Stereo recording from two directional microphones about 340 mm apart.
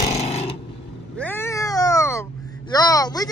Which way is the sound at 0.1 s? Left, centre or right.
Centre.